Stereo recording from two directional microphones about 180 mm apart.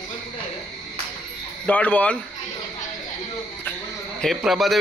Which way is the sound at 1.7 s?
10° left (ahead or behind).